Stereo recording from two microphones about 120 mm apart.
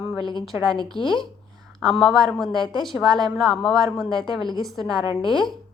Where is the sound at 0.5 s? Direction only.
20° right (ahead or behind).